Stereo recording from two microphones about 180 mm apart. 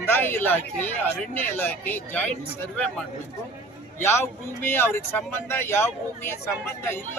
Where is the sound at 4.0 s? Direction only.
15° left (ahead or behind).